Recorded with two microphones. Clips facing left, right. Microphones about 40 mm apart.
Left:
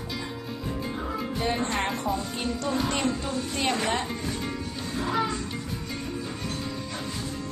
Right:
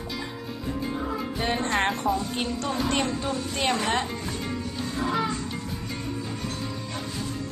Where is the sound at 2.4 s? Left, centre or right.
Right.